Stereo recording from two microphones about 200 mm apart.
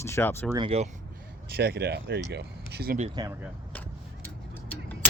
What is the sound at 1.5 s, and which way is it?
Speech, 50° right (ahead or behind).